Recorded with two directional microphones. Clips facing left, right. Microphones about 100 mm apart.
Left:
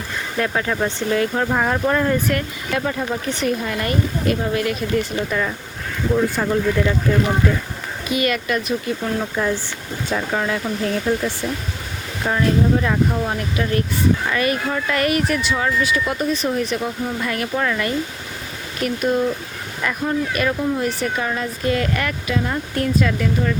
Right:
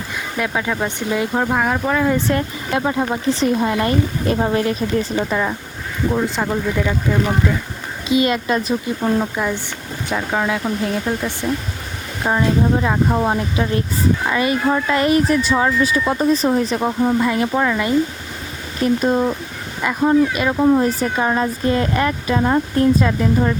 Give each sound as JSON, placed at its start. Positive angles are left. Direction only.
{"t": 0.3, "sound": "speech", "side_deg": -10}
{"t": 1.5, "sound": "speech", "side_deg": -5}
{"t": 2.1, "sound": "speech", "side_deg": -25}
{"t": 4.4, "sound": "speech", "side_deg": -40}
{"t": 4.6, "sound": "speech", "side_deg": -30}
{"t": 8.0, "sound": "speech", "side_deg": -25}
{"t": 9.1, "sound": "speech", "side_deg": -10}
{"t": 12.2, "sound": "speech", "side_deg": -20}
{"t": 20.6, "sound": "speech", "side_deg": -35}